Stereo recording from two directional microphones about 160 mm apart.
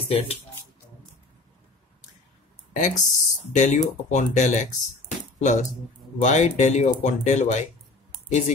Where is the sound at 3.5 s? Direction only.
50° left (ahead or behind).